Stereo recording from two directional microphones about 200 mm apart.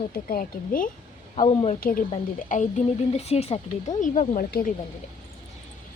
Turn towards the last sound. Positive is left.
turn(degrees=45)  # may be behind; listen again after turning